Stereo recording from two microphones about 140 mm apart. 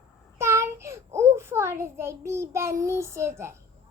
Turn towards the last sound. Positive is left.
turn(degrees=-20)  # may be behind; listen again after turning